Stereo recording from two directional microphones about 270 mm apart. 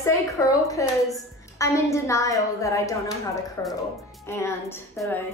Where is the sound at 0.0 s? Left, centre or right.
Centre.